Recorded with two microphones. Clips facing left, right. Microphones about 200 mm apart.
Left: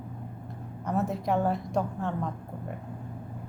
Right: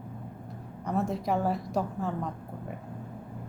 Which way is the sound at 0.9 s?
Centre (ahead or behind).